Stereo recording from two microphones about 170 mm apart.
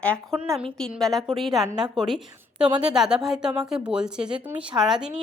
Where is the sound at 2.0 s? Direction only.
Centre (ahead or behind).